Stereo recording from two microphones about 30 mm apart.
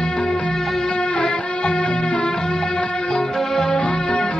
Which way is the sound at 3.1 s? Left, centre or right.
Centre.